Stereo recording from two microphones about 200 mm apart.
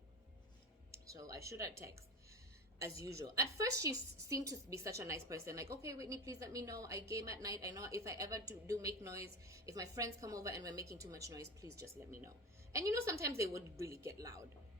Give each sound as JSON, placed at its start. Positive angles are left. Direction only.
{"t": 0.9, "sound": "a woman's voice", "side_deg": -15}